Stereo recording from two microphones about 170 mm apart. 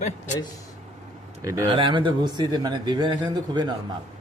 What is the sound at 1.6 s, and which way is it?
Speech, 30° right (ahead or behind).